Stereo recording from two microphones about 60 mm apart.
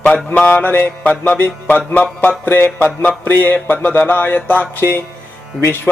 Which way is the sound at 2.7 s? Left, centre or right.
Left.